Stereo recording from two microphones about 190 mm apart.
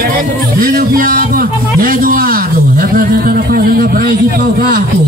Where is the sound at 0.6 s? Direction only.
50° right (ahead or behind).